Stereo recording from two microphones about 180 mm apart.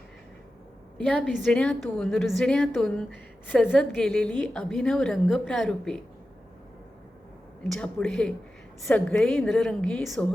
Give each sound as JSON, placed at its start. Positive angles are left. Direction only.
{"t": 0.9, "sound": "a woman's voice", "side_deg": 5}
{"t": 7.7, "sound": "a woman's voice", "side_deg": 5}